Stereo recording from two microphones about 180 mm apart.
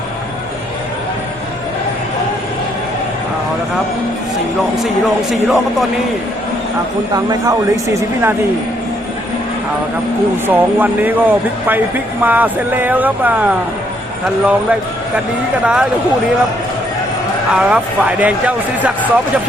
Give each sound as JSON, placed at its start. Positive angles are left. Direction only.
{"t": 5.3, "sound": "speech", "side_deg": 0}
{"t": 7.1, "sound": "speech", "side_deg": -15}
{"t": 10.4, "sound": "a man's voice", "side_deg": -10}
{"t": 17.5, "sound": "speech", "side_deg": -5}